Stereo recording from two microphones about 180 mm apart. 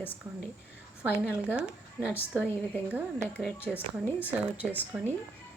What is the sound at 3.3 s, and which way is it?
Speech, centre (ahead or behind).